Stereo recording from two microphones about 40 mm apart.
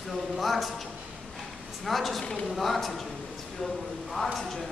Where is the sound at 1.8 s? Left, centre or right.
Centre.